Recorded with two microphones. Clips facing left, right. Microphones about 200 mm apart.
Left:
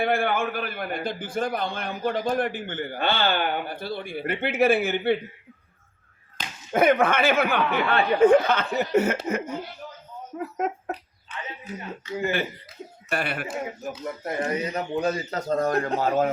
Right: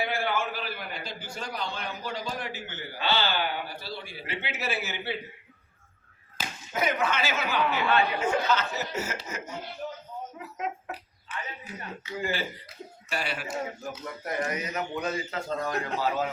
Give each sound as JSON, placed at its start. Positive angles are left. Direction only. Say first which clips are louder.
{"t": 0.0, "sound": "a man's voice", "louder": "left 5 dB", "side_deg": 55}
{"t": 6.4, "sound": "slap", "louder": "right 1 dB", "side_deg": -5}
{"t": 6.7, "sound": "speech", "louder": "left 8 dB", "side_deg": 55}
{"t": 13.1, "sound": "speech", "louder": "left 5 dB", "side_deg": 55}
{"t": 13.8, "sound": "speech", "louder": "left 5 dB", "side_deg": 25}